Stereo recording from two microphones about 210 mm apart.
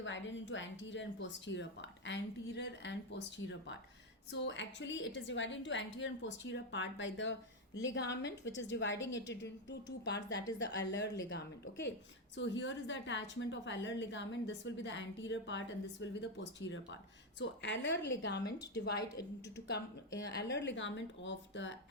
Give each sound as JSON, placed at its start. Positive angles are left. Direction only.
{"t": 0.0, "sound": "a woman's voice", "side_deg": 60}
{"t": 18.9, "sound": "a woman's voice", "side_deg": 15}
{"t": 20.1, "sound": "a woman's voice", "side_deg": 55}